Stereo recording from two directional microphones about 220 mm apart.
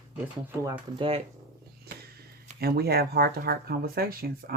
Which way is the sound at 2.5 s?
45° right (ahead or behind).